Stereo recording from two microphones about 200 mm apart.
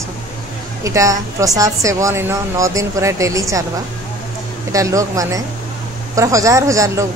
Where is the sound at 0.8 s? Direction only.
15° right (ahead or behind).